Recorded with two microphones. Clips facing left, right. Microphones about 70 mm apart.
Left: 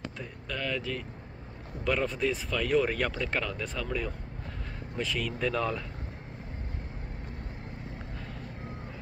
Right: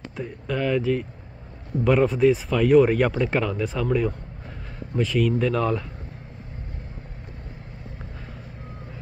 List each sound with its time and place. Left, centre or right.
0.2 s speech: centre